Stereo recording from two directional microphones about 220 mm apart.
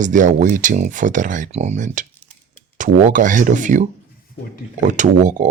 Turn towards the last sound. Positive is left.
turn(degrees=-35)  # may be behind; listen again after turning